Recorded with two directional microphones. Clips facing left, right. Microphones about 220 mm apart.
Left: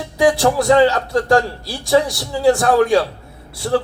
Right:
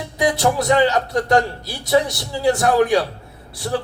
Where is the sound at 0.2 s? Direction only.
20° right (ahead or behind).